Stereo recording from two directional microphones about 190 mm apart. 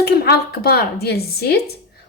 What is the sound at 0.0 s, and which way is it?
A woman's voice, 55° left (ahead or behind).